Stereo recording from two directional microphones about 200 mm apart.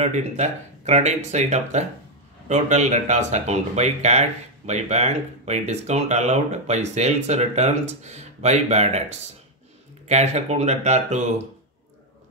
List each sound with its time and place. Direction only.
0.0 s speech: 35° right (ahead or behind)